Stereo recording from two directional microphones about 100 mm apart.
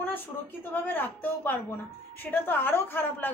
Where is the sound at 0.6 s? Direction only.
20° left (ahead or behind).